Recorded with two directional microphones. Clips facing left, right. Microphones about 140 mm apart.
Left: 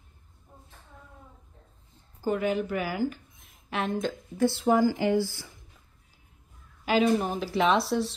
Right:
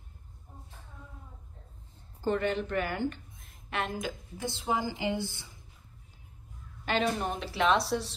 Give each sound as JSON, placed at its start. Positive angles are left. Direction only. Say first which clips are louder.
{"t": 2.2, "sound": "a woman's voice", "louder": "left 2 dB", "side_deg": 5}
{"t": 4.4, "sound": "a woman's voice", "louder": "left 10 dB", "side_deg": -15}
{"t": 6.8, "sound": "speech", "louder": "left 6 dB", "side_deg": 5}